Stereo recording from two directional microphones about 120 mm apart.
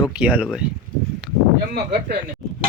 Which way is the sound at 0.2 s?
10° right (ahead or behind).